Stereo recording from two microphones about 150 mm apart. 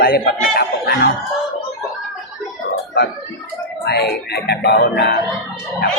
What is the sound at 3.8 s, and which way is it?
Speech, 90° left.